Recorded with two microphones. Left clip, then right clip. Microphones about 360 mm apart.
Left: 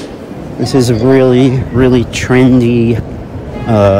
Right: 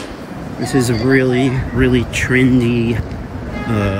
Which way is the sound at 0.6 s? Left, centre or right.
Centre.